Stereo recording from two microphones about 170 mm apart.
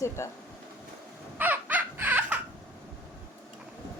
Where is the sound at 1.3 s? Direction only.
10° right (ahead or behind).